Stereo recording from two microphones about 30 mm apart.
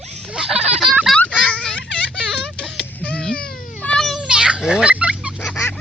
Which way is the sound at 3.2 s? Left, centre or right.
Left.